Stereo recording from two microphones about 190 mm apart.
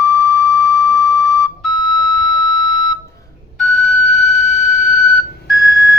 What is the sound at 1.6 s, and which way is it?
Music, centre (ahead or behind).